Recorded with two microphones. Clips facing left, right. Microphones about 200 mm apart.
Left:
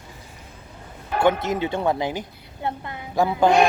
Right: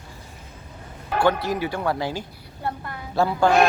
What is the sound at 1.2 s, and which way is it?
A woman's voice, 20° left (ahead or behind).